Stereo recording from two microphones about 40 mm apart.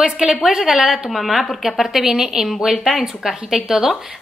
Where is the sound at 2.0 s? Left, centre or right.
Centre.